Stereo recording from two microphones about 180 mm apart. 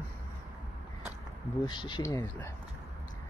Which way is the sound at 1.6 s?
25° left (ahead or behind).